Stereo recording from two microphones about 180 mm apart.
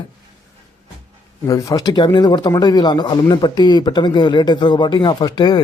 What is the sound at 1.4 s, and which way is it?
Speech, 20° left (ahead or behind).